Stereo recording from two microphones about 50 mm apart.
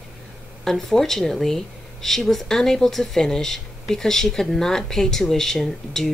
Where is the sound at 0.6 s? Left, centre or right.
Centre.